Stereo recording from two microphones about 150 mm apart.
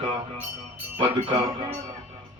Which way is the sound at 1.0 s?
35° right (ahead or behind).